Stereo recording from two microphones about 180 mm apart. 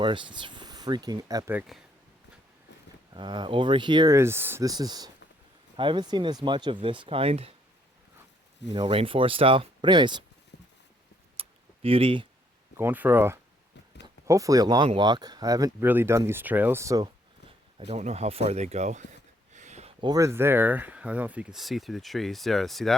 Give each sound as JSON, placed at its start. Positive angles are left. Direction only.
{"t": 0.0, "sound": "speech", "side_deg": -25}
{"t": 1.5, "sound": "speech", "side_deg": 0}
{"t": 3.2, "sound": "speech", "side_deg": -25}
{"t": 8.7, "sound": "speech", "side_deg": -30}
{"t": 10.5, "sound": "clip-clop", "side_deg": 65}
{"t": 11.3, "sound": "a sound", "side_deg": -30}
{"t": 12.7, "sound": "speech", "side_deg": -10}
{"t": 17.7, "sound": "speech", "side_deg": -35}
{"t": 19.5, "sound": "a sound", "side_deg": -40}
{"t": 20.0, "sound": "speech", "side_deg": -20}